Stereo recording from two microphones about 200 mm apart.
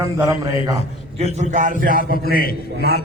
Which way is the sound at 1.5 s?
40° right (ahead or behind).